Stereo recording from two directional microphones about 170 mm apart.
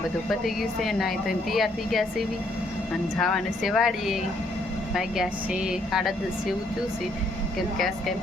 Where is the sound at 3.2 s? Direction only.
Centre (ahead or behind).